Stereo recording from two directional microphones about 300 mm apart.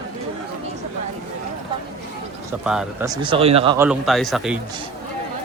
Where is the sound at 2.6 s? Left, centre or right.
Centre.